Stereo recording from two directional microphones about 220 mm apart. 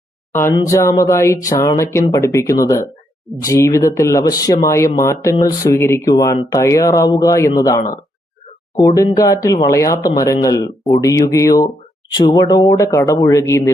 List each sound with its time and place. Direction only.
0.3 s speech: 15° left (ahead or behind)